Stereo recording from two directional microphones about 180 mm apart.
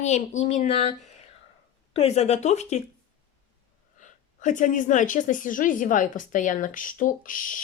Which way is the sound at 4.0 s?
45° left (ahead or behind).